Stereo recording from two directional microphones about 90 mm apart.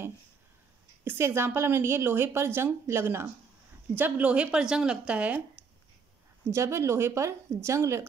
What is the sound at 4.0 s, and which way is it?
A woman's voice, 15° right (ahead or behind).